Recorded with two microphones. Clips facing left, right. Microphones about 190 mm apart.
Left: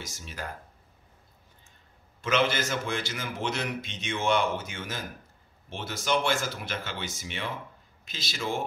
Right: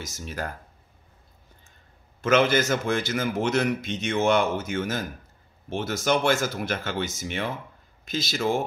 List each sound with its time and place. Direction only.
0.0 s a man's voice: 45° right (ahead or behind)
2.2 s a man's voice: 45° right (ahead or behind)